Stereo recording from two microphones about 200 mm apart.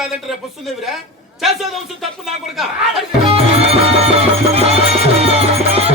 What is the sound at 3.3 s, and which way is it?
Music, 30° right (ahead or behind).